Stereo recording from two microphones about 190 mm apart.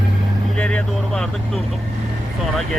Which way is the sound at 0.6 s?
5° left (ahead or behind).